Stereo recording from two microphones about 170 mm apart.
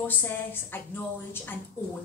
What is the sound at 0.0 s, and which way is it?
A woman's voice, 10° left (ahead or behind).